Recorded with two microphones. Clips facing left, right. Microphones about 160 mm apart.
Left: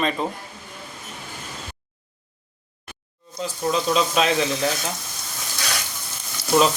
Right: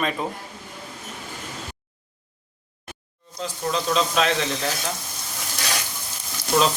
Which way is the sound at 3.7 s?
5° left (ahead or behind).